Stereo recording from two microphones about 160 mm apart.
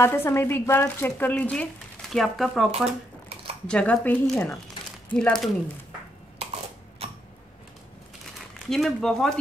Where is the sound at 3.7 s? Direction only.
5° left (ahead or behind).